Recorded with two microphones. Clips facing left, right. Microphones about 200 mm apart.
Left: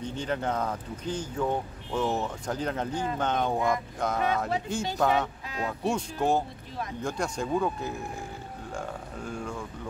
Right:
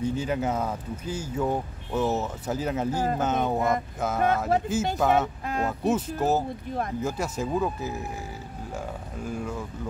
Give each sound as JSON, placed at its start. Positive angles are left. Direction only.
{"t": 0.0, "sound": "speech", "side_deg": -5}
{"t": 5.4, "sound": "a sound", "side_deg": -50}
{"t": 5.7, "sound": "speech", "side_deg": -5}